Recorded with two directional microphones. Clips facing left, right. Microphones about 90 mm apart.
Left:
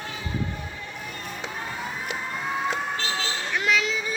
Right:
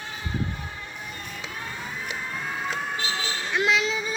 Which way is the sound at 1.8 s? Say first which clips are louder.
Left 2 dB; 5° left (ahead or behind).